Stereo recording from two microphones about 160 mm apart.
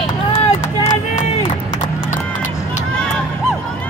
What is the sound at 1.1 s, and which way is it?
Run, 45° left (ahead or behind).